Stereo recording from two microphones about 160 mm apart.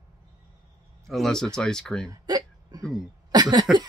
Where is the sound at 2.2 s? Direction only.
25° right (ahead or behind).